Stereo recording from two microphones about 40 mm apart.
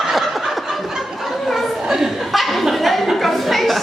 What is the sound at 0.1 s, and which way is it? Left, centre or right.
Snicker, centre.